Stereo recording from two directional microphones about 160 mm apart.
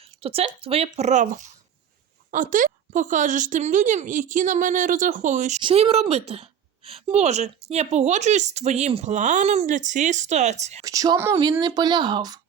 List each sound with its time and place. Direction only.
0.0 s a woman's voice: 40° right (ahead or behind)
5.6 s a woman's voice: 40° right (ahead or behind)
10.8 s speech: 20° right (ahead or behind)